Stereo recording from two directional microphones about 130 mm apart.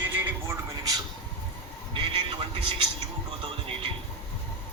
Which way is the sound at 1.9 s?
40° right (ahead or behind).